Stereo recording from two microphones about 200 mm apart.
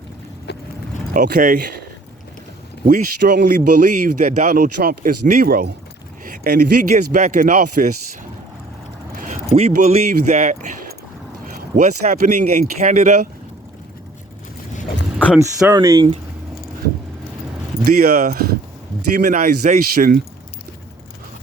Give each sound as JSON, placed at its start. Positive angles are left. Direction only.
{"t": 0.5, "sound": "vehicle", "side_deg": 55}
{"t": 1.1, "sound": "speech", "side_deg": -40}
{"t": 2.8, "sound": "speech", "side_deg": -45}
{"t": 9.1, "sound": "vehicle", "side_deg": -40}
{"t": 10.3, "sound": "speech", "side_deg": -35}
{"t": 11.8, "sound": "speech", "side_deg": -35}
{"t": 15.3, "sound": "speech", "side_deg": -5}
{"t": 15.7, "sound": "speech", "side_deg": -15}
{"t": 17.8, "sound": "speech", "side_deg": -45}